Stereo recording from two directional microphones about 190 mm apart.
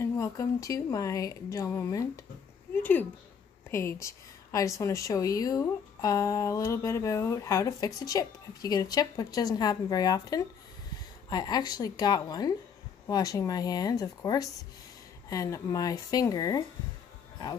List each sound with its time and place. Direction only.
0.0 s a woman's voice: 15° left (ahead or behind)
2.7 s a sound: 10° left (ahead or behind)
3.7 s a woman's voice: 15° left (ahead or behind)